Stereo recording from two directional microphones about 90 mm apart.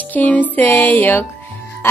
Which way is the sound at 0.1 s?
20° left (ahead or behind).